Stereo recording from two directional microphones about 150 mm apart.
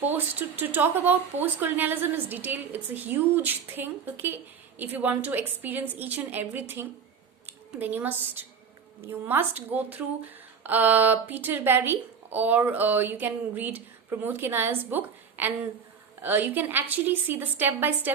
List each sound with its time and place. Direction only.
0.0 s speech: 10° right (ahead or behind)